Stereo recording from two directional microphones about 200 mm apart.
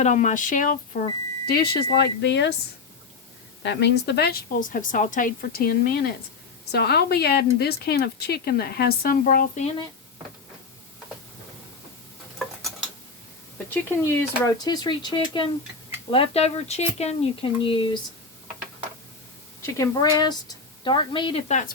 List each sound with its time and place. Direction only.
0.0 s speech: 40° left (ahead or behind); by 2.6 s 60° left (ahead or behind)
3.6 s a woman's voice: 60° left (ahead or behind)
14.0 s a woman's voice: 15° left (ahead or behind)
19.6 s a woman's voice: 15° left (ahead or behind); by 21.7 s 35° left (ahead or behind)